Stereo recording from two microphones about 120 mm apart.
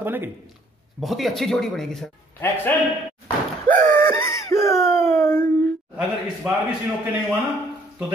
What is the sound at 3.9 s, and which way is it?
Wheeze, 20° left (ahead or behind).